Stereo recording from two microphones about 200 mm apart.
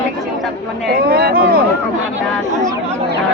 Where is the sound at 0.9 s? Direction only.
50° right (ahead or behind).